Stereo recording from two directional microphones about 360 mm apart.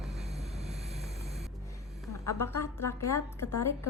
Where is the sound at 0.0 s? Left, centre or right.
Centre.